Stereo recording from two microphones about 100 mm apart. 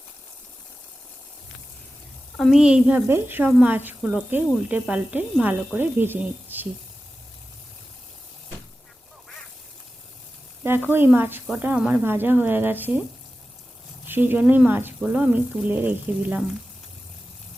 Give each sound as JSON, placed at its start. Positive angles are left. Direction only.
{"t": 2.3, "sound": "a woman's voice", "side_deg": 5}
{"t": 2.6, "sound": "speech", "side_deg": -10}
{"t": 10.6, "sound": "speech", "side_deg": -20}
{"t": 14.1, "sound": "speech", "side_deg": -20}